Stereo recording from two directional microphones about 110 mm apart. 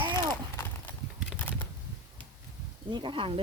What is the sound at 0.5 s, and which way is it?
Horse, 20° left (ahead or behind).